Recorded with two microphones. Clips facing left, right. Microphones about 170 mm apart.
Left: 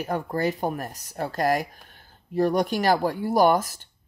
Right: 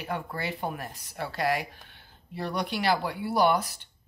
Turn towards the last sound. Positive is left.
turn(degrees=45)  # may be behind; listen again after turning